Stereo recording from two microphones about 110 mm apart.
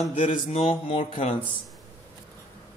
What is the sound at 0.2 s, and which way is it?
Speech, 80° left.